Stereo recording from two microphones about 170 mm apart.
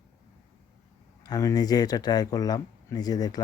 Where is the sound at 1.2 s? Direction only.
20° left (ahead or behind).